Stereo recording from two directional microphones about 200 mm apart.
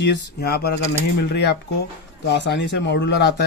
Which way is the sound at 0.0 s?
55° left (ahead or behind).